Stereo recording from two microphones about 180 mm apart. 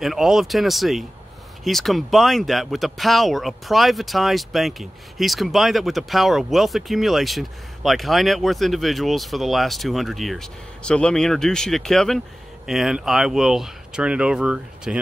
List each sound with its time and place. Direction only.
0.0 s speech: centre (ahead or behind)